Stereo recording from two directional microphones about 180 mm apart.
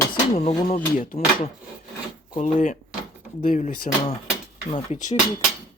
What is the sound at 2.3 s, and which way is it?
Speech, 45° left (ahead or behind).